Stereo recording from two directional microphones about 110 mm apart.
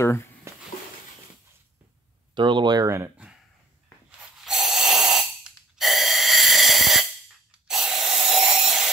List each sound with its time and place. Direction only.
0.0 s speech: 25° left (ahead or behind)
2.3 s speech: 45° right (ahead or behind)
4.5 s snort: 5° right (ahead or behind)
7.6 s a sound: 5° right (ahead or behind)